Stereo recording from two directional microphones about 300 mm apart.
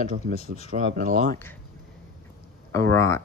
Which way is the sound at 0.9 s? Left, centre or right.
Right.